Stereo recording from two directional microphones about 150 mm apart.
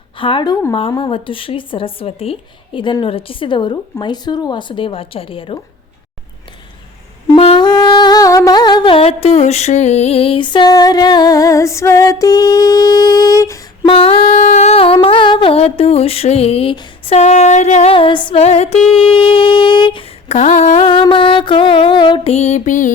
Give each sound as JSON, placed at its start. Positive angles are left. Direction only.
{"t": 0.2, "sound": "speech", "side_deg": 35}
{"t": 7.3, "sound": "a sound", "side_deg": 35}
{"t": 13.8, "sound": "speech", "side_deg": 40}
{"t": 17.9, "sound": "speech", "side_deg": 35}
{"t": 18.4, "sound": "music", "side_deg": 45}
{"t": 19.0, "sound": "speech", "side_deg": 35}
{"t": 21.0, "sound": "speech", "side_deg": 35}